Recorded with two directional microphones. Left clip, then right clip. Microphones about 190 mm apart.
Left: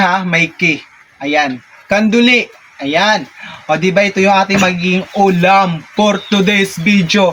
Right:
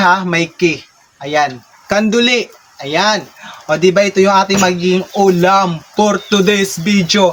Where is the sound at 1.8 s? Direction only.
25° right (ahead or behind).